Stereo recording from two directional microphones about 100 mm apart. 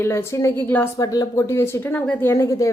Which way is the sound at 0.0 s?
25° left (ahead or behind).